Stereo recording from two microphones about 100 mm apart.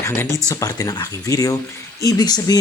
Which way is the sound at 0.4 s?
35° left (ahead or behind).